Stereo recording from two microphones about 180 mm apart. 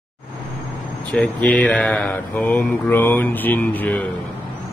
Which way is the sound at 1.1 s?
5° left (ahead or behind).